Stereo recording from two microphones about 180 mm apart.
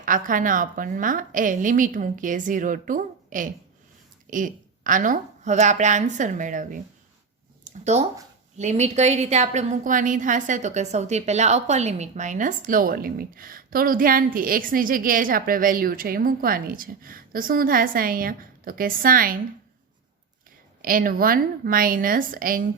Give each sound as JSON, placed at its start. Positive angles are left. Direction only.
{"t": 0.0, "sound": "a woman's voice", "side_deg": -50}
{"t": 7.6, "sound": "a sound", "side_deg": -40}
{"t": 8.5, "sound": "a woman's voice", "side_deg": -40}
{"t": 20.8, "sound": "a woman's voice", "side_deg": -50}